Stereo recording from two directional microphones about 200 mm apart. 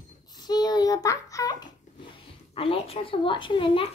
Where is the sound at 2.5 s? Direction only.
30° left (ahead or behind).